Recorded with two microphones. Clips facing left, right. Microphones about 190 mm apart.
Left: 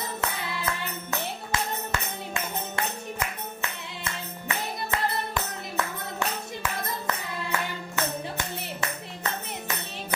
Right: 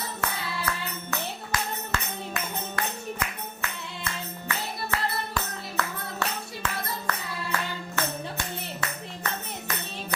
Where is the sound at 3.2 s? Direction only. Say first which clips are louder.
Left 1 dB; 25° left (ahead or behind).